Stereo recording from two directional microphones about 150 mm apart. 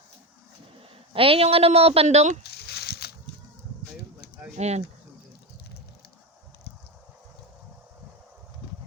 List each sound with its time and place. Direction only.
1.1 s speech: 35° right (ahead or behind)
2.4 s a sound: 90° left
4.5 s speech: 50° right (ahead or behind)